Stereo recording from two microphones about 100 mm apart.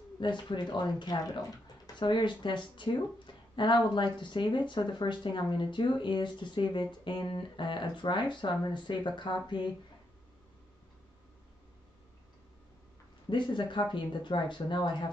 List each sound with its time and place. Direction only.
0.2 s speech: 50° left (ahead or behind)
13.3 s speech: 55° left (ahead or behind)